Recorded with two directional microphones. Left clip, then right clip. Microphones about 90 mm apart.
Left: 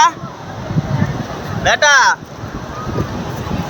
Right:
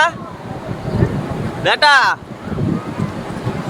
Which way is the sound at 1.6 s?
30° right (ahead or behind).